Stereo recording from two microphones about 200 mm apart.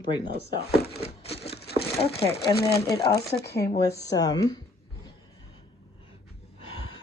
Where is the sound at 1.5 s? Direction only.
55° left (ahead or behind).